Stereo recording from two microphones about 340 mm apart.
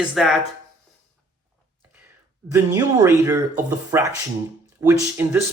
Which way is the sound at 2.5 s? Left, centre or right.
Centre.